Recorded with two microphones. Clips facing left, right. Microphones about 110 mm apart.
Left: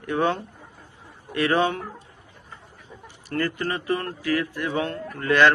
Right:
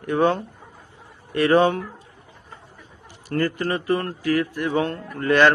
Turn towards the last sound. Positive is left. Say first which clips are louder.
# right 2 dB
turn(degrees=-35)  # may be behind; listen again after turning